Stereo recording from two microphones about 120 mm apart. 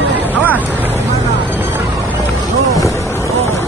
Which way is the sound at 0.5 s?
15° right (ahead or behind).